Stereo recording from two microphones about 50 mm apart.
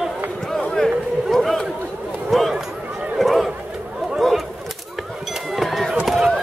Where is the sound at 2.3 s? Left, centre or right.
Centre.